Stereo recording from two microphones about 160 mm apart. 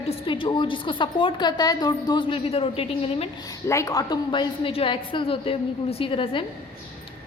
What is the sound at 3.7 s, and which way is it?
A woman's voice, 20° left (ahead or behind).